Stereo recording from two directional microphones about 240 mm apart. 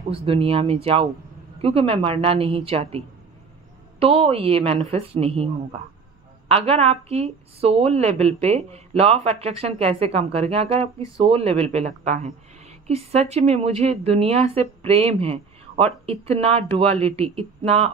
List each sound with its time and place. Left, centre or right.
0.1 s a woman's voice: right
4.0 s a woman's voice: right
6.5 s a woman's voice: right